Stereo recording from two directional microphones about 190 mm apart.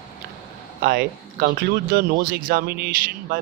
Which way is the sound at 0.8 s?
50° right (ahead or behind).